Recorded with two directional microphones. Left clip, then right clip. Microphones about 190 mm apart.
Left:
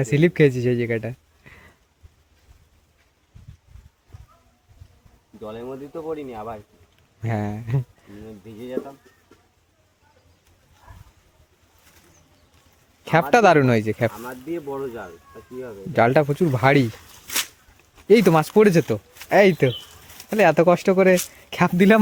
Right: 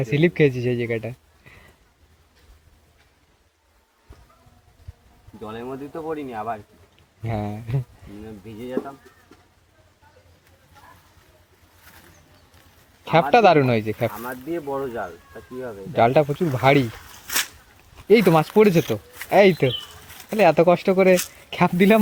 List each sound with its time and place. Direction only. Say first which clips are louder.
0.0 s a man's voice: left 1 dB; 40° left (ahead or behind)
5.4 s speech: right 1 dB; 5° left (ahead or behind)
7.2 s speech: left 1 dB; 40° left (ahead or behind)
8.8 s speech: right 1 dB; 55° right (ahead or behind)
13.3 s speech: left 1 dB; 45° left (ahead or behind)
14.1 s speech: right 2 dB; 5° left (ahead or behind)
15.9 s speech: even; 50° left (ahead or behind)
16.9 s a sound: right 1 dB; centre (ahead or behind)
18.1 s speech: even; 45° left (ahead or behind)